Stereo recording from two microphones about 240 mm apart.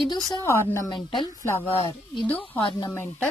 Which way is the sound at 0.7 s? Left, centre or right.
Centre.